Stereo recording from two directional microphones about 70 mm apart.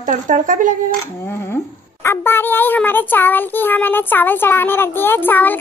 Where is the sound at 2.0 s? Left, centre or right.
Left.